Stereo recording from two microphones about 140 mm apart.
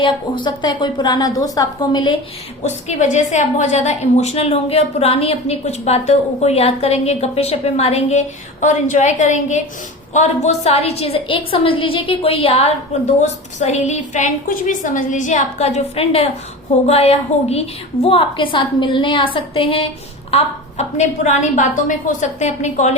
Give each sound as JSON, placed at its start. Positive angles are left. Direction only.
{"t": 0.4, "sound": "a woman's voice", "side_deg": 30}
{"t": 2.6, "sound": "a woman's voice", "side_deg": 55}
{"t": 20.3, "sound": "a woman's voice", "side_deg": 55}